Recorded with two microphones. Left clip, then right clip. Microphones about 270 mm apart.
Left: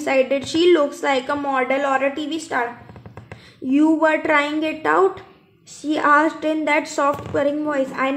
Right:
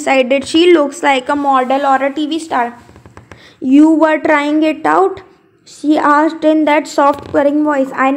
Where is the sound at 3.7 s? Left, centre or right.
Right.